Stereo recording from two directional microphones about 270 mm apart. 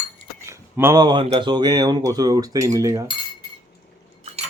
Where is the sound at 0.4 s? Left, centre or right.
Centre.